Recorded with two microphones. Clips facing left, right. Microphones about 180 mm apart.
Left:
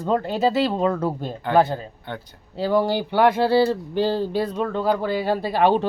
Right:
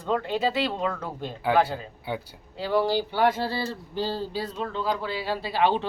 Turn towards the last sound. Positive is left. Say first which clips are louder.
# left 5 dB
turn(degrees=50)  # may be behind; listen again after turning